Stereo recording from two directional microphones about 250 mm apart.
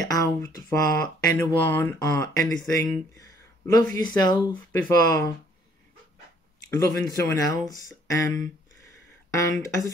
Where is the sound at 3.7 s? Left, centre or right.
Centre.